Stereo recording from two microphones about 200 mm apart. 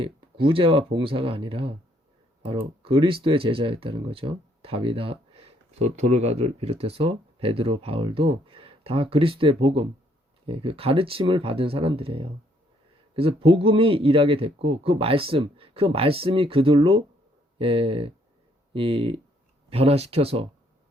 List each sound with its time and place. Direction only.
0.0 s speech: 25° right (ahead or behind)